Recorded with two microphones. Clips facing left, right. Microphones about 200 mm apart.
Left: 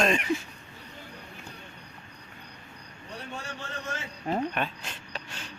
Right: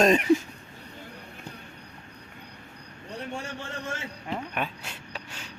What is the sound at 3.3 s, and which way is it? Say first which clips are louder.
Speech: right 3 dB; 30° right (ahead or behind).